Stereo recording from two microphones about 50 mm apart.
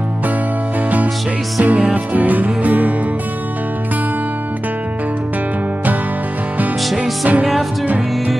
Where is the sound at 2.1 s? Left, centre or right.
Right.